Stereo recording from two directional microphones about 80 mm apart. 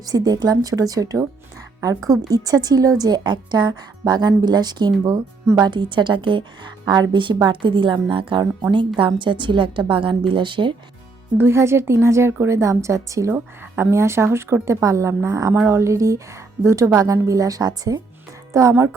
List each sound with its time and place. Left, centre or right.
0.0 s a woman's voice: right
2.3 s a woman's voice: right
5.6 s a woman's voice: right
7.3 s a woman's voice: right
11.3 s a woman's voice: right
18.5 s a woman's voice: right